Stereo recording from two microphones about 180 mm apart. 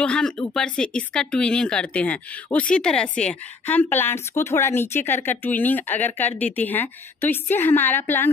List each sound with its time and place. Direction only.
0.0 s a woman's voice: 5° left (ahead or behind)